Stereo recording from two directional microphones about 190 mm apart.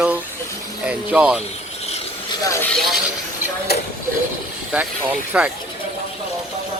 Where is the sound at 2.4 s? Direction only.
15° left (ahead or behind).